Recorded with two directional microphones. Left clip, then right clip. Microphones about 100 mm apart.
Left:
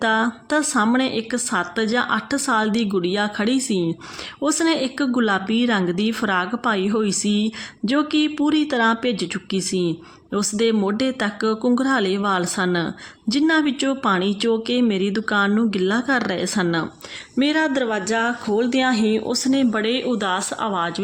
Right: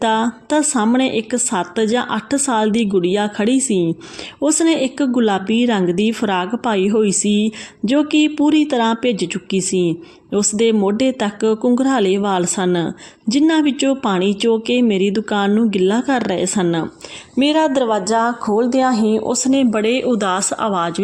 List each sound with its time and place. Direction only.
0.0 s a woman's voice: 30° right (ahead or behind)
19.8 s speech: 50° right (ahead or behind)